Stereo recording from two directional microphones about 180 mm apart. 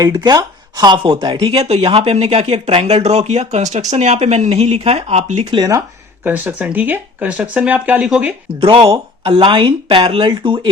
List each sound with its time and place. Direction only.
0.0 s speech: 20° right (ahead or behind)
5.5 s speech: 20° right (ahead or behind)
8.6 s speech: 30° right (ahead or behind)